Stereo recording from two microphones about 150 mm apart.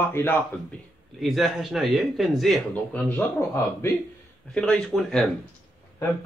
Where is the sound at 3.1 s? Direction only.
15° left (ahead or behind).